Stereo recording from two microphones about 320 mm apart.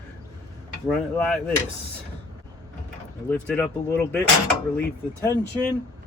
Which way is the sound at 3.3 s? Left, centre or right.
Centre.